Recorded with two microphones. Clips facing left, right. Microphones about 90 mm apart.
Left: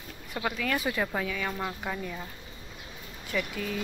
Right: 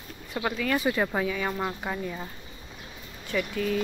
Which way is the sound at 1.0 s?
10° right (ahead or behind).